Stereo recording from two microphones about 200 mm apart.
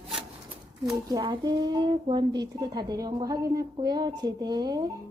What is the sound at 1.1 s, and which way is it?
A woman's voice, 20° right (ahead or behind).